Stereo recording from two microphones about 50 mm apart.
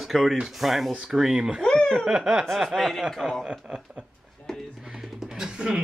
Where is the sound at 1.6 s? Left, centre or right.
Centre.